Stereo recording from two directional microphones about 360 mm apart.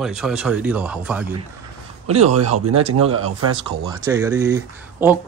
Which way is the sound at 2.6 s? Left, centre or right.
Right.